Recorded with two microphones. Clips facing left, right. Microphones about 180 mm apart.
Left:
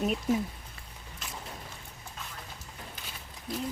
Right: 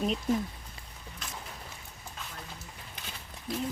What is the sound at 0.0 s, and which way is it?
Speech, 5° left (ahead or behind).